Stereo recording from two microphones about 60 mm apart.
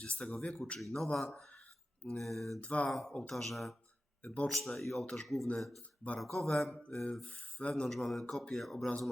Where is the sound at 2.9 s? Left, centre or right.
Centre.